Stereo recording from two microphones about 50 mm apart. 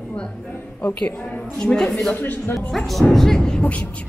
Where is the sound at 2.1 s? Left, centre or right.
Left.